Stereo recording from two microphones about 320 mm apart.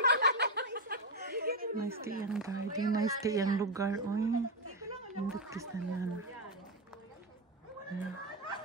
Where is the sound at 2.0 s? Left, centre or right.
Right.